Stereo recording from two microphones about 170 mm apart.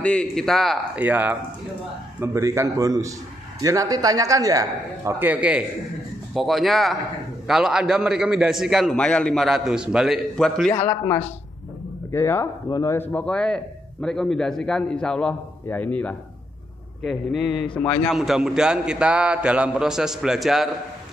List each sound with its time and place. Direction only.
0.0 s a man's voice: 5° left (ahead or behind)
12.1 s a man's voice: 15° left (ahead or behind); by 20.7 s centre (ahead or behind)